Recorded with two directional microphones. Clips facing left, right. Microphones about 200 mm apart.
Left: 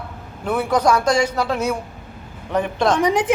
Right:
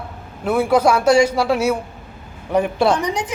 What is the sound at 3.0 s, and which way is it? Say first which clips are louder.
Speech: left 5 dB; 90° left.